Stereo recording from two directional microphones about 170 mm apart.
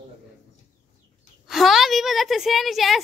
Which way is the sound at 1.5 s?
Centre (ahead or behind).